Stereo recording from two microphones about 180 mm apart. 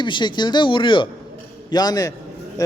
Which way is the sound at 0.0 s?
25° left (ahead or behind).